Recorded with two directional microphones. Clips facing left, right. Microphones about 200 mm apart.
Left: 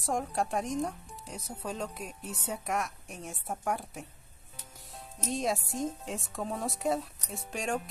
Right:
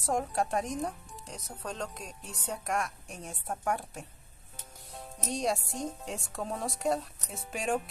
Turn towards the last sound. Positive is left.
turn(degrees=-5)  # may be behind; listen again after turning